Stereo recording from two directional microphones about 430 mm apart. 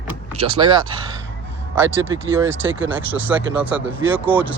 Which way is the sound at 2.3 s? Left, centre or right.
Centre.